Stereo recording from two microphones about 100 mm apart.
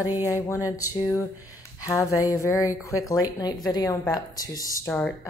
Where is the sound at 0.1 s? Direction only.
20° right (ahead or behind).